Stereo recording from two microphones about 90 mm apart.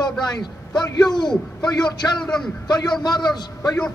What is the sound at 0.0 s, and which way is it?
A man's voice, 50° left (ahead or behind).